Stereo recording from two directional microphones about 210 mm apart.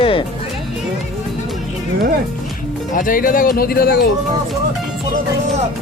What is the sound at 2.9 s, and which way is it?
Speech, 40° left (ahead or behind).